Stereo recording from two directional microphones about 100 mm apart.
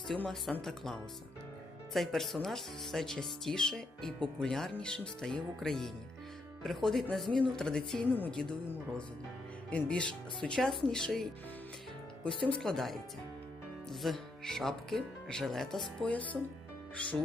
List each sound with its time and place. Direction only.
0.1 s a woman's voice: 5° left (ahead or behind)
8.1 s a woman's voice: 15° left (ahead or behind)
9.6 s speech: 10° left (ahead or behind)
12.5 s a woman's voice: 5° left (ahead or behind)